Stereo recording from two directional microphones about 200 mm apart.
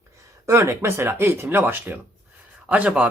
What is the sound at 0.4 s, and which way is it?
Speech, 15° right (ahead or behind).